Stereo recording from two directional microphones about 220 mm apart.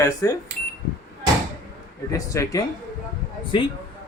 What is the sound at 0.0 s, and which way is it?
Speech, 15° left (ahead or behind).